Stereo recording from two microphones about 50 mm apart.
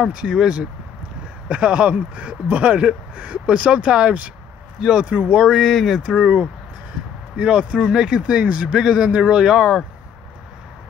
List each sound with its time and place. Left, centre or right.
0.1 s speech: centre
5.0 s speech: right
5.4 s speech: centre
5.9 s speech: centre
8.7 s speech: centre